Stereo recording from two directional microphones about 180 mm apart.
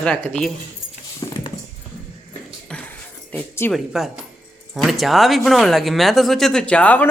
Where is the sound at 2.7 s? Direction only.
10° left (ahead or behind).